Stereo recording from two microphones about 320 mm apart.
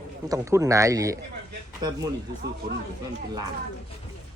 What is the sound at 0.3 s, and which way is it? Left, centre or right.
Speech, centre.